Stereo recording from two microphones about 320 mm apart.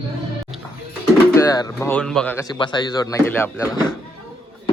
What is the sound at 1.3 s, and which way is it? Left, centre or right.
A man's voice, centre.